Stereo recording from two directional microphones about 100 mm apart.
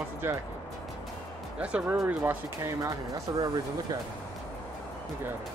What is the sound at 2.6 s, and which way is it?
Speech, 35° right (ahead or behind).